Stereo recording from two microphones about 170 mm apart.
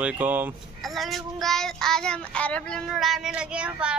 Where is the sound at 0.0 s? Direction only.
10° right (ahead or behind).